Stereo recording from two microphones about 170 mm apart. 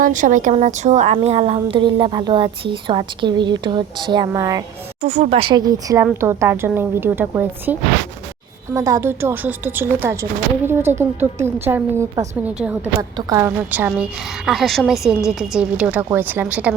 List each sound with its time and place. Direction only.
0.0 s a woman's voice: 50° right (ahead or behind); by 4.6 s 20° right (ahead or behind)
5.0 s a woman's voice: 40° right (ahead or behind); by 12.9 s 10° right (ahead or behind)
13.0 s a woman's voice: 20° right (ahead or behind)